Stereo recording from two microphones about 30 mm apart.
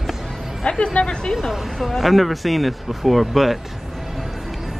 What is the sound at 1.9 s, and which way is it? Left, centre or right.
Speech, centre.